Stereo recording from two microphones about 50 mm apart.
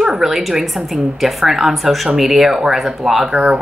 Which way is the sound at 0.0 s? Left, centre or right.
Centre.